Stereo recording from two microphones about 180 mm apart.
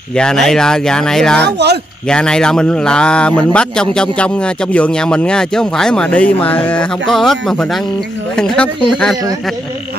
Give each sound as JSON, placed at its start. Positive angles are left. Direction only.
{"t": 0.1, "sound": "a man's voice", "side_deg": 5}
{"t": 1.4, "sound": "speech", "side_deg": -70}
{"t": 2.0, "sound": "a man's voice", "side_deg": 5}